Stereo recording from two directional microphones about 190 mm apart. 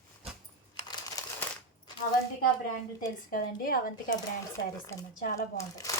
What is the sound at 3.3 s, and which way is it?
Speech, 50° left (ahead or behind).